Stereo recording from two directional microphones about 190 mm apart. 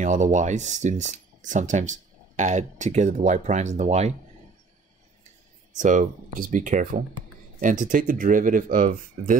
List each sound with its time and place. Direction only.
0.0 s speech: 40° right (ahead or behind)
5.8 s speech: 45° right (ahead or behind)